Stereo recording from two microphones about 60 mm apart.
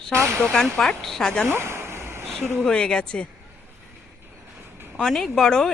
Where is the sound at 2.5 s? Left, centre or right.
Centre.